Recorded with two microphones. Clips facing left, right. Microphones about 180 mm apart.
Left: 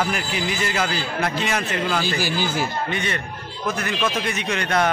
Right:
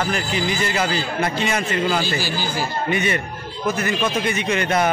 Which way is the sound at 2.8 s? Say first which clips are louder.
Right 5 dB; 10° right (ahead or behind).